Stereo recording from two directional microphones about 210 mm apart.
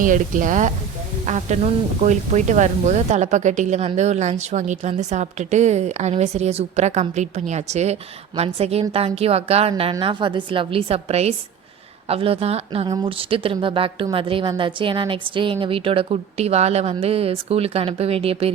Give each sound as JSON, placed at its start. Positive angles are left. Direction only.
{"t": 0.0, "sound": "a woman's voice", "side_deg": -40}